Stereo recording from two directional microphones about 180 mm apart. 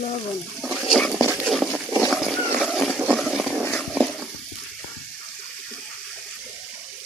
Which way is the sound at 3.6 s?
5° left (ahead or behind).